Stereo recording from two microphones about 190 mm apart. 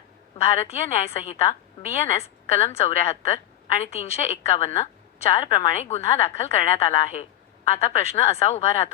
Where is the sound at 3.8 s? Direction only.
15° left (ahead or behind).